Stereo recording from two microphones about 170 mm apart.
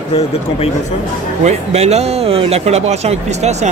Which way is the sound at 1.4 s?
40° right (ahead or behind).